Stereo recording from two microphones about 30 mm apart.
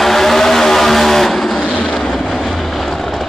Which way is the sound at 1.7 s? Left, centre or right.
Left.